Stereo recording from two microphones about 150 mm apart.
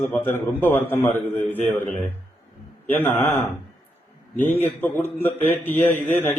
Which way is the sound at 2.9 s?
15° left (ahead or behind).